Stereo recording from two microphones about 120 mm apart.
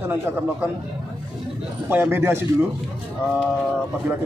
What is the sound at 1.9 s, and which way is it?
Speech, 20° right (ahead or behind).